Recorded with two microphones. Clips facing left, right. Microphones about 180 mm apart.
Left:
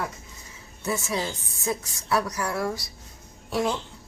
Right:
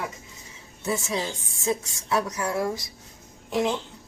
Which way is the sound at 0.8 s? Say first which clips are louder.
Even; 25° right (ahead or behind).